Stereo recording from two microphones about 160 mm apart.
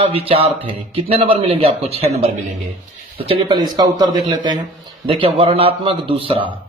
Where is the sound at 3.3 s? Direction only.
30° right (ahead or behind).